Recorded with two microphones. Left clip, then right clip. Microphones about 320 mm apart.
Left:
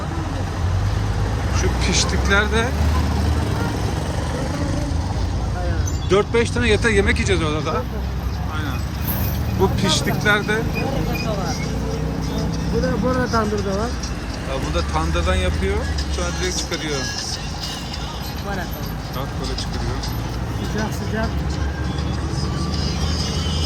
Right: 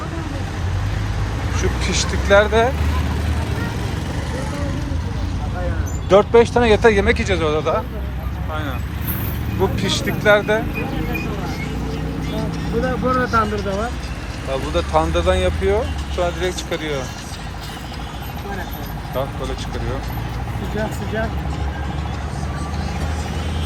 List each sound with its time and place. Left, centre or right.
1.5 s speech: centre
6.1 s speech: centre
9.7 s speech: centre
13.1 s speech: centre
14.9 s speech: centre